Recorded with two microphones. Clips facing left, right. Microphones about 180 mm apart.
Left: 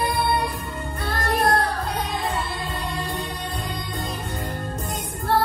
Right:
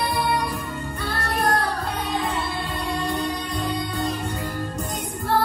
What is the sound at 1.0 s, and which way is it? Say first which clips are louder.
Music: left 3 dB; 35° left (ahead or behind).